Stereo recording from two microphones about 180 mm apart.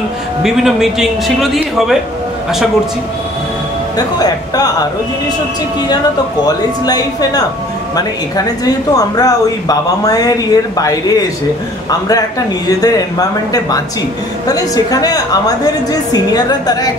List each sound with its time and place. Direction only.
0.4 s a man's voice: centre (ahead or behind)
6.4 s a woman's voice: 20° left (ahead or behind)
8.9 s a woman's voice: 20° left (ahead or behind)